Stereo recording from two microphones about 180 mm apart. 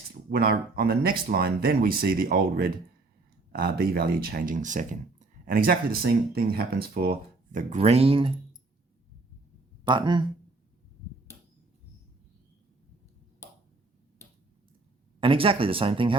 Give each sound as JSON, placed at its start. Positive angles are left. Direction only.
{"t": 0.1, "sound": "speech", "side_deg": -55}
{"t": 7.8, "sound": "speech", "side_deg": -35}
{"t": 9.8, "sound": "speech", "side_deg": -25}
{"t": 15.2, "sound": "speech", "side_deg": -30}